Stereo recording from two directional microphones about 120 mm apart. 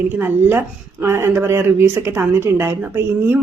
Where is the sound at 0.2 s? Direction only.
20° right (ahead or behind).